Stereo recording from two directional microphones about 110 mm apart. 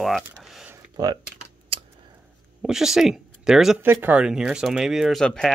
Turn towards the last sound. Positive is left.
turn(degrees=5)  # may be behind; listen again after turning